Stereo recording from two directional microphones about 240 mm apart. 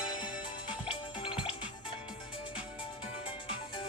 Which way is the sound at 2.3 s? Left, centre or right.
Left.